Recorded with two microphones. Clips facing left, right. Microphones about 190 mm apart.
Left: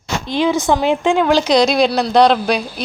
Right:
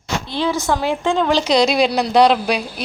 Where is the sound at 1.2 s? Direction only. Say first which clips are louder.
Left 1 dB; centre (ahead or behind).